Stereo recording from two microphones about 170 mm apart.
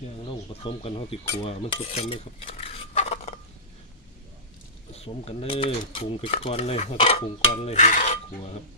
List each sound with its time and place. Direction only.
0.3 s mechanisms: 35° left (ahead or behind)
1.5 s stir: 35° left (ahead or behind)
5.0 s mechanisms: 35° left (ahead or behind)